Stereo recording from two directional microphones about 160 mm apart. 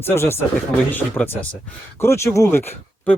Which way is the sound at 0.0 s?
15° left (ahead or behind).